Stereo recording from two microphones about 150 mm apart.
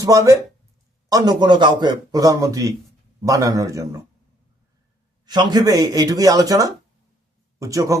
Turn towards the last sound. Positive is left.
turn(degrees=-20)  # may be behind; listen again after turning